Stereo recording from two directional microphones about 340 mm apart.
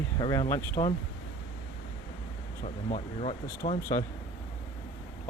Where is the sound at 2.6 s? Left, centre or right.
Centre.